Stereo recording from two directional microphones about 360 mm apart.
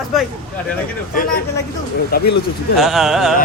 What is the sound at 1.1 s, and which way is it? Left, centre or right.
Music, left.